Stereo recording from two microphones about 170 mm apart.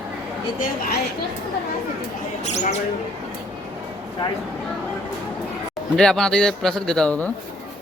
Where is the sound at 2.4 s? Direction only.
40° left (ahead or behind).